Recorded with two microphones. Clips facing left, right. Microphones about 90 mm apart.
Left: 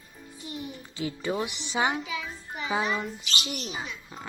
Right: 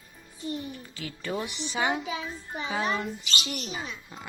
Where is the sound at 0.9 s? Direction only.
20° left (ahead or behind).